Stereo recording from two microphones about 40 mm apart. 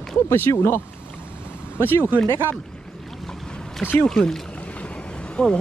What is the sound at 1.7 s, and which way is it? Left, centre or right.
Speech, left.